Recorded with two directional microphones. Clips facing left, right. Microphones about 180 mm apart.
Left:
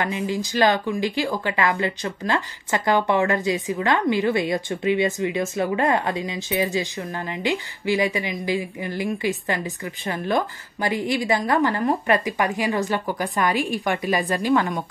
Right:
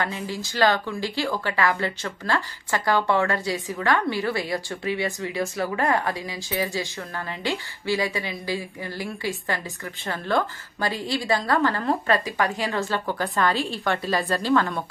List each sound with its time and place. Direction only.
0.0 s a woman's voice: 15° left (ahead or behind)